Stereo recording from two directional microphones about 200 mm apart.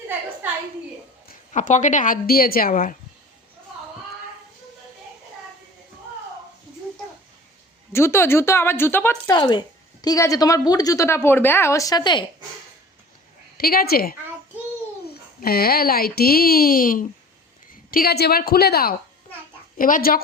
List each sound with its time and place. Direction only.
1.5 s speech: 40° left (ahead or behind)
7.9 s a woman's voice: 15° left (ahead or behind)
9.3 s a woman's voice: 25° left (ahead or behind)
13.6 s speech: 50° left (ahead or behind)
15.4 s speech: 50° left (ahead or behind)